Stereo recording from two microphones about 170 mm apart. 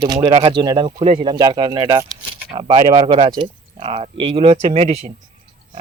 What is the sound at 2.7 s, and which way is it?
Speech, 35° right (ahead or behind).